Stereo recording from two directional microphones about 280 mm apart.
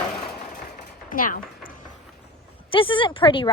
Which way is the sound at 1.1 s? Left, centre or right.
Left.